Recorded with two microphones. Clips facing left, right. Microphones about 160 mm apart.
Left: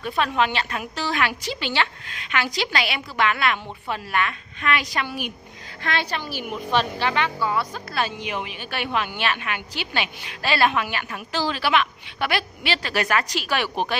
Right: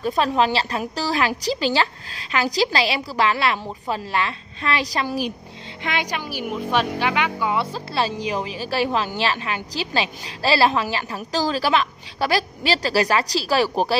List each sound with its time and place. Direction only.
0.0 s a woman's voice: 35° right (ahead or behind)
5.8 s speech: 15° right (ahead or behind)
7.7 s a woman's voice: 30° right (ahead or behind)